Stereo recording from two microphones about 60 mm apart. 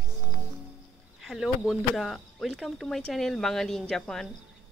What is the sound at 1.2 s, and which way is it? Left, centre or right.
Speech, centre.